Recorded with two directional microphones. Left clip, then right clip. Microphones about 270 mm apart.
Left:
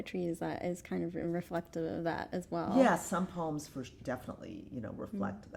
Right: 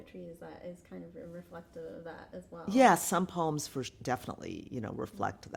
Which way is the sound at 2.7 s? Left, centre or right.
Right.